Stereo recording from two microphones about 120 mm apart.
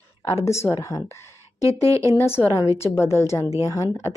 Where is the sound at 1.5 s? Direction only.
30° right (ahead or behind).